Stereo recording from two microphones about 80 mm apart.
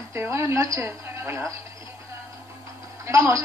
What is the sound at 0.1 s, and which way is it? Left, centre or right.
A woman's voice, right.